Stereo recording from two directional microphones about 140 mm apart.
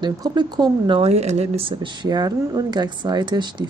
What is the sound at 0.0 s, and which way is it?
Speech, 30° right (ahead or behind).